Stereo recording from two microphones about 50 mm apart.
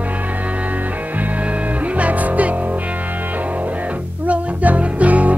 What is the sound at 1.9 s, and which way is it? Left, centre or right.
Music, right.